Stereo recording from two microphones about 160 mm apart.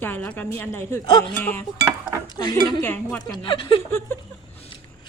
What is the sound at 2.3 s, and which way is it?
Speech, 25° left (ahead or behind).